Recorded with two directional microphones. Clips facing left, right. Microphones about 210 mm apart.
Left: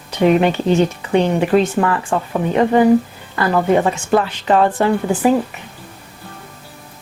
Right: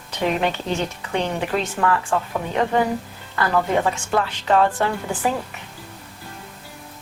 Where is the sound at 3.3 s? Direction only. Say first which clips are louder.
Left 5 dB; 20° left (ahead or behind).